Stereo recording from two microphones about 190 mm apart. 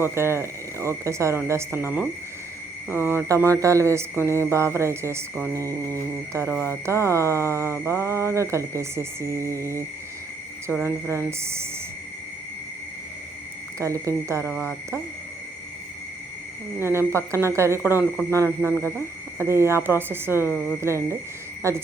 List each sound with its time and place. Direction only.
0.0 s speech: 15° right (ahead or behind)
10.8 s speech: 10° right (ahead or behind)
13.7 s speech: 15° right (ahead or behind)
14.4 s speech: 5° left (ahead or behind)
16.8 s speech: 15° right (ahead or behind)